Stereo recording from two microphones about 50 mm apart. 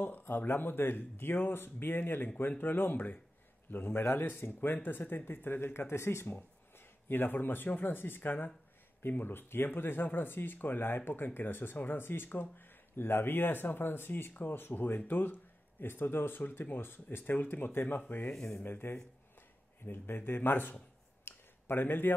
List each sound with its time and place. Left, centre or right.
0.0 s speech: left
7.1 s speech: left
18.3 s speech: centre
18.6 s speech: left
20.2 s speech: left
21.2 s a sound: left